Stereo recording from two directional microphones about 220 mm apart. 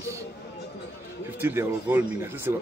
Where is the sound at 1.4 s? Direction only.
10° right (ahead or behind).